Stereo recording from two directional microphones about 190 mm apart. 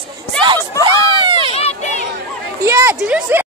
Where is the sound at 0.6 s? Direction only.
15° left (ahead or behind).